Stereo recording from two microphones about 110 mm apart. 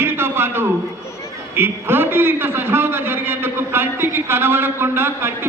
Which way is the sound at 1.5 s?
20° right (ahead or behind).